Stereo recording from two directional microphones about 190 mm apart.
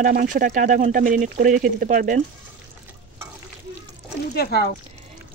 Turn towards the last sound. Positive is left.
turn(degrees=55)  # may be behind; listen again after turning